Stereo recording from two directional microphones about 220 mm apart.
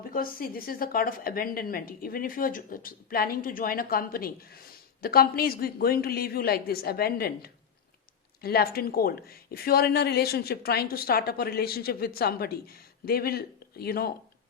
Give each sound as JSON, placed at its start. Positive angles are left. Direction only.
{"t": 0.1, "sound": "a woman's voice", "side_deg": 40}